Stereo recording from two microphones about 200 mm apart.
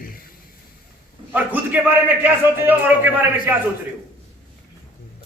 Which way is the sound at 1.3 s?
10° right (ahead or behind).